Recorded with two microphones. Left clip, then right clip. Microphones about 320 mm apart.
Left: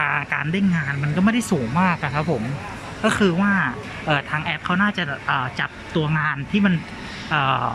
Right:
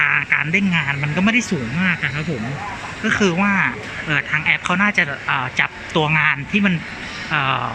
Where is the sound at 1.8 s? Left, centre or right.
Centre.